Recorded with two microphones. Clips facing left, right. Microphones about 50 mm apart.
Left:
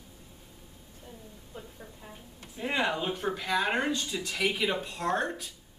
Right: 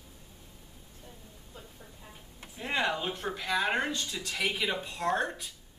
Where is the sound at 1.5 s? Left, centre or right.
Centre.